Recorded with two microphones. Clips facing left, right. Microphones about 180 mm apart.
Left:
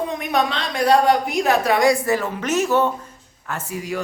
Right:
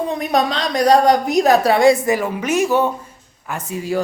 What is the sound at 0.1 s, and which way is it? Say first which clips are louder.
A woman's voice: right 3 dB; 35° right (ahead or behind).